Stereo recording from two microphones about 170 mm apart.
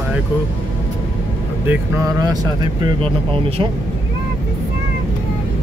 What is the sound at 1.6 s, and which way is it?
Speech, 20° right (ahead or behind).